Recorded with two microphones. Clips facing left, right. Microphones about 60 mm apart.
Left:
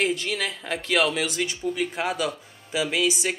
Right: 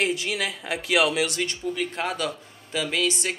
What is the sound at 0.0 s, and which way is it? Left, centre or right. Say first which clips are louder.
Speech: even; centre.